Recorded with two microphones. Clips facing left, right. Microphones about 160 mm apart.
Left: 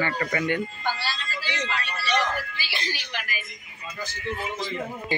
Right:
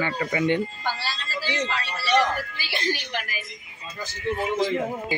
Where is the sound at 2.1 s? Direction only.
50° right (ahead or behind).